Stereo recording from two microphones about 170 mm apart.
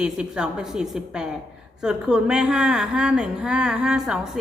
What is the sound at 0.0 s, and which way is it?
A woman's voice, 5° right (ahead or behind).